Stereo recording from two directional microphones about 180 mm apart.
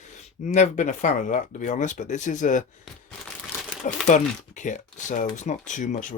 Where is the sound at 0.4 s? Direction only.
45° left (ahead or behind).